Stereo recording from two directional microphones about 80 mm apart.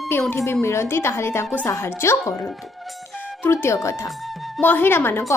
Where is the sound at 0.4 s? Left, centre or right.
Left.